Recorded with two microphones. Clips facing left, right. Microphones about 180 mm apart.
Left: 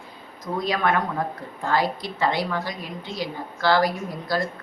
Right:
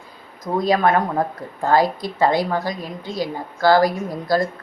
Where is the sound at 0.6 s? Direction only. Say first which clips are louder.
Right 6 dB; 40° right (ahead or behind).